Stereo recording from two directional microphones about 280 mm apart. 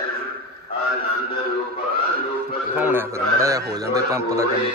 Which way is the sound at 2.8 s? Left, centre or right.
Centre.